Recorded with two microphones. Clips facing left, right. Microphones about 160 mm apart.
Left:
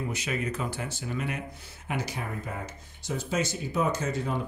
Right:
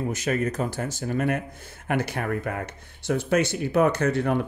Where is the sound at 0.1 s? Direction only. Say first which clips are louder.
Right 6 dB; 45° right (ahead or behind).